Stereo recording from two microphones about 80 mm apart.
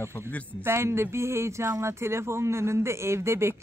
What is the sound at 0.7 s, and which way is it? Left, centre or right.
A man's voice, right.